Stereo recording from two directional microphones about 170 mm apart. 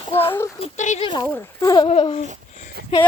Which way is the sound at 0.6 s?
40° left (ahead or behind).